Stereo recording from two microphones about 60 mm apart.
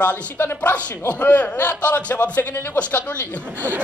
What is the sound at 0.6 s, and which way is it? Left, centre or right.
A man's voice, left.